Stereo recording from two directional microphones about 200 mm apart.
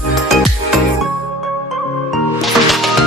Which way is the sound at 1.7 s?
Centre (ahead or behind).